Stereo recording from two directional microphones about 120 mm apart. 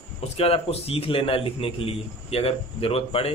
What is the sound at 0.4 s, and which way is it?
A man's voice, 55° left (ahead or behind).